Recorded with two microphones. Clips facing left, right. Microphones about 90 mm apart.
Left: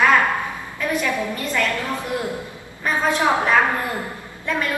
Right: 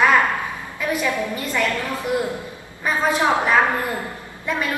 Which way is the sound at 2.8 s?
5° right (ahead or behind).